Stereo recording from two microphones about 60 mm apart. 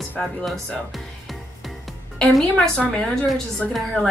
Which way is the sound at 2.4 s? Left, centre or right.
Centre.